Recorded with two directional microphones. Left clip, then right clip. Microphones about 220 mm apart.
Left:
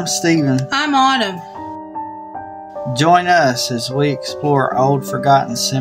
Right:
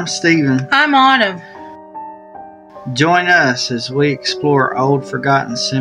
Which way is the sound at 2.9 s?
30° left (ahead or behind).